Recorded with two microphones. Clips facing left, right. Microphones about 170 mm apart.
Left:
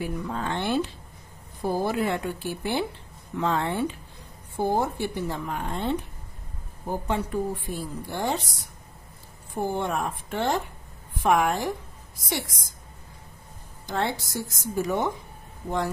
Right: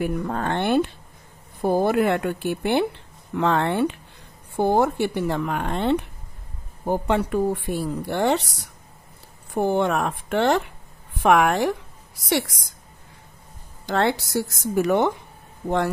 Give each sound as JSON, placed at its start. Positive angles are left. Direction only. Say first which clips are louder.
{"t": 0.0, "sound": "a woman's voice", "louder": "right 5 dB", "side_deg": -55}
{"t": 13.8, "sound": "a woman's voice", "louder": "right 6 dB", "side_deg": -75}